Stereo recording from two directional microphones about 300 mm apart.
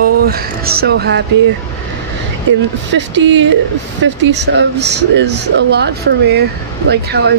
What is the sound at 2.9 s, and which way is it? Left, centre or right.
Speech, right.